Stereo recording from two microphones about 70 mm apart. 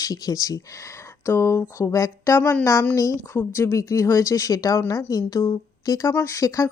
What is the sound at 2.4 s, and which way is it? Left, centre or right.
Speech, centre.